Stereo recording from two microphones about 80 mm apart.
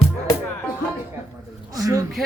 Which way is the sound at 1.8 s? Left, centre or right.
Right.